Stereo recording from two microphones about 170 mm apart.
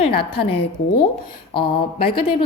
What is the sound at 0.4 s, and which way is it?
A woman's voice, 35° left (ahead or behind).